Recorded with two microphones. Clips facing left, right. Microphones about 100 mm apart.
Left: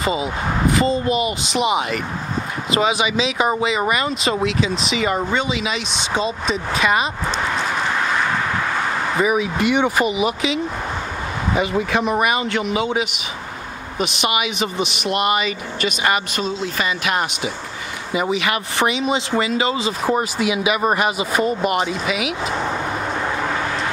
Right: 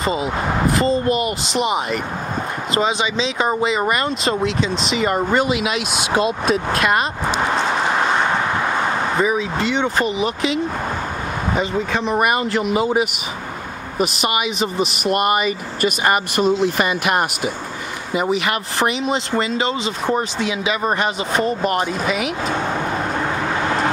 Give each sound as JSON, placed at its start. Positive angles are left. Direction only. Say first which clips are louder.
{"t": 0.0, "sound": "speech", "louder": "even", "side_deg": 0}
{"t": 1.0, "sound": "speech", "louder": "right 1 dB", "side_deg": -50}
{"t": 1.4, "sound": "speech", "louder": "left 1 dB", "side_deg": 0}
{"t": 9.2, "sound": "speech", "louder": "left 4 dB", "side_deg": 15}
{"t": 15.0, "sound": "speech", "louder": "right 2 dB", "side_deg": -45}
{"t": 16.3, "sound": "speech", "louder": "right 6 dB", "side_deg": -60}
{"t": 18.1, "sound": "speech", "louder": "right 1 dB", "side_deg": 0}